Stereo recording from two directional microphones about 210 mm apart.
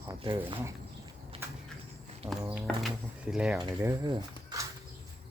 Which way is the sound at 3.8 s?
15° right (ahead or behind).